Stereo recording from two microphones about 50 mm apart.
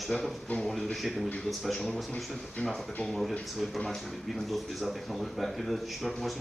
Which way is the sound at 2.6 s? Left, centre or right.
Left.